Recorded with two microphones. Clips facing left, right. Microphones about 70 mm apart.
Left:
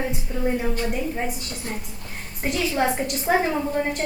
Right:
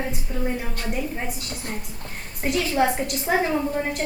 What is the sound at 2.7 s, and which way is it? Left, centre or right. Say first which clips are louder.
A woman's voice: right 1 dB; centre.